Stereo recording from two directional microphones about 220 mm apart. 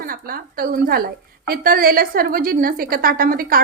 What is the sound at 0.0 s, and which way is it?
A woman's voice, 40° right (ahead or behind).